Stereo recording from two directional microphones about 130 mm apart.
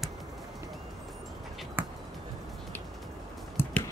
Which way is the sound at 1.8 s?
15° right (ahead or behind).